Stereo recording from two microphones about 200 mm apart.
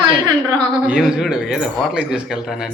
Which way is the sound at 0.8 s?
5° right (ahead or behind).